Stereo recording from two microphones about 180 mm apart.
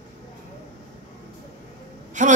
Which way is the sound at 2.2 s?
45° right (ahead or behind).